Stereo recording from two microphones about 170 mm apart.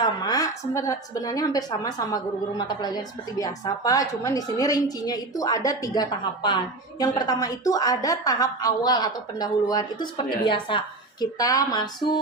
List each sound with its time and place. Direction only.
0.0 s a woman's voice: 25° left (ahead or behind)